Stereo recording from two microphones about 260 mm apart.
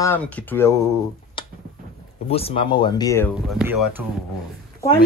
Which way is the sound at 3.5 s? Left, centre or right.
Centre.